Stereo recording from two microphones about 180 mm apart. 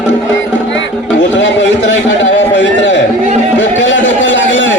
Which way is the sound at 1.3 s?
90° left.